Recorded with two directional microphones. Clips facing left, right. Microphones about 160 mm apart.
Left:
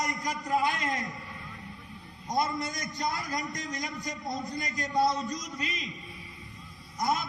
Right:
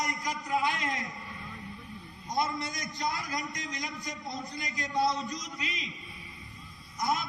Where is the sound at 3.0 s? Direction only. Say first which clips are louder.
Left 1 dB; 45° left (ahead or behind).